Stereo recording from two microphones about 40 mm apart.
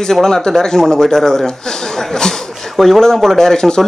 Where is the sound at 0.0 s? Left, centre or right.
Centre.